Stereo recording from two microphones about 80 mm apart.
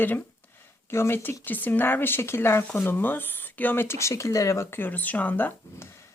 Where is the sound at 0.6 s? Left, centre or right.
Left.